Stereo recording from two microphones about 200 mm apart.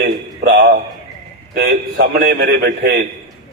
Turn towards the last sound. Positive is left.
turn(degrees=-55)  # may be behind; listen again after turning